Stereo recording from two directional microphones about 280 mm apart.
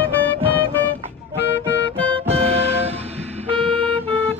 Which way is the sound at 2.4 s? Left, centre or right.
Right.